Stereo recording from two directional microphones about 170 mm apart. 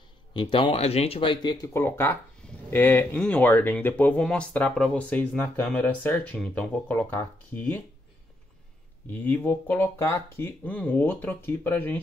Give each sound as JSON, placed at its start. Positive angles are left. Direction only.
{"t": 0.3, "sound": "speech", "side_deg": 30}
{"t": 1.7, "sound": "speech", "side_deg": 15}
{"t": 9.1, "sound": "speech", "side_deg": 10}